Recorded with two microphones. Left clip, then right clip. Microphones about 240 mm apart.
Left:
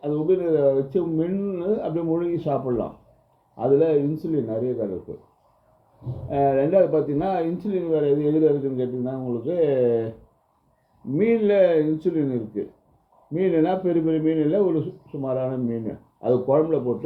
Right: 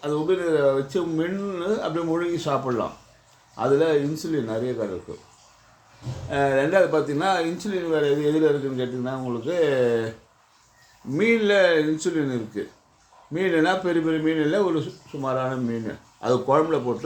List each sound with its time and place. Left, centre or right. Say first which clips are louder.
0.0 s speech: left 1 dB; right
6.2 s speech: left 1 dB; right
11.3 s speech: even; right